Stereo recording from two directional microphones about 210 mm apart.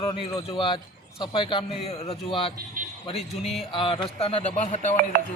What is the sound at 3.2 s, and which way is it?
Speech, centre (ahead or behind).